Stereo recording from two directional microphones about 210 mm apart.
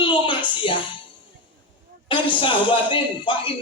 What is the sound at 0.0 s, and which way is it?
Music, 25° left (ahead or behind).